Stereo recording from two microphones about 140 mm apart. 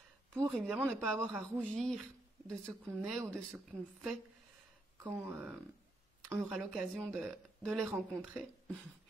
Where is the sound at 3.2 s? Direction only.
5° right (ahead or behind).